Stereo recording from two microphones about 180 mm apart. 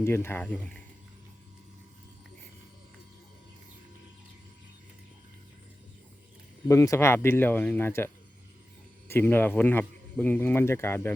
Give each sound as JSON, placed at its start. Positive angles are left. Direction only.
{"t": 0.0, "sound": "speech", "side_deg": 15}
{"t": 6.7, "sound": "speech", "side_deg": 15}